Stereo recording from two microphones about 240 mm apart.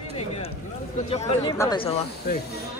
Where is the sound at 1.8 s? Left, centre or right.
Left.